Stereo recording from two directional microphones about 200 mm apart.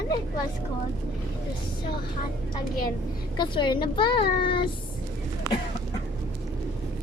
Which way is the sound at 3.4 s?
25° left (ahead or behind).